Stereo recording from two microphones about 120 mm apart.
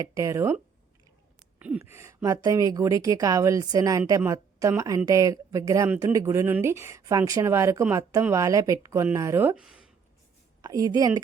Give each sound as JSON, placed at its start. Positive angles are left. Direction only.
{"t": 0.0, "sound": "speech", "side_deg": -25}
{"t": 1.5, "sound": "a sound", "side_deg": -10}
{"t": 1.8, "sound": "speech", "side_deg": -25}
{"t": 9.6, "sound": "speech", "side_deg": -5}
{"t": 10.6, "sound": "speech", "side_deg": -30}